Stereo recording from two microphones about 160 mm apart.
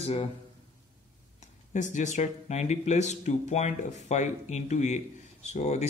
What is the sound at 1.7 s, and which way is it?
A man's voice, 50° left (ahead or behind).